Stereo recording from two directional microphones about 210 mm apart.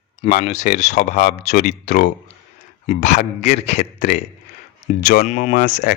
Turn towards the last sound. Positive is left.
turn(degrees=35)  # may be behind; listen again after turning